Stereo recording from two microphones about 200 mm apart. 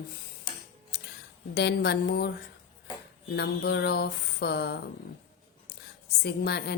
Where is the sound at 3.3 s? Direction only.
55° left (ahead or behind).